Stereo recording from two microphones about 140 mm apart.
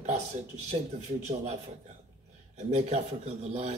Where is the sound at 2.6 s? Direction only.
50° right (ahead or behind).